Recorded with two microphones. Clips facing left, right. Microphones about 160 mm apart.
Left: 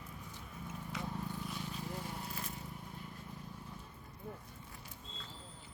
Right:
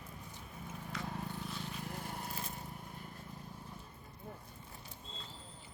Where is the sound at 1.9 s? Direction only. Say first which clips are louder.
Left 1 dB; 50° right (ahead or behind).